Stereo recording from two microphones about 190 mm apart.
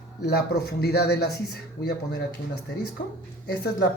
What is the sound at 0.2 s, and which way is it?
Speech, 60° left (ahead or behind).